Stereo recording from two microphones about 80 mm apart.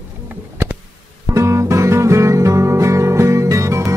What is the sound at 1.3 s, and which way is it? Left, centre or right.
Music, right.